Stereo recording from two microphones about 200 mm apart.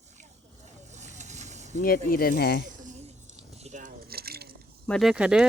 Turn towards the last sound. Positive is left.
turn(degrees=-5)  # may be behind; listen again after turning